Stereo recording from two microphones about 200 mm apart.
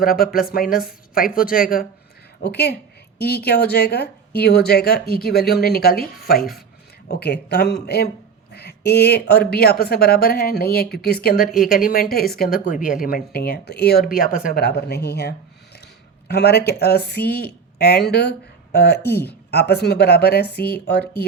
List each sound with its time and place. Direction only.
0.0 s a woman's voice: 45° left (ahead or behind)
19.0 s speech: 10° left (ahead or behind)
19.5 s a woman's voice: 55° left (ahead or behind)